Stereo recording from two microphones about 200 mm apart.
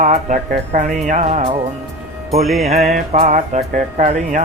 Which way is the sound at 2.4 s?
Centre (ahead or behind).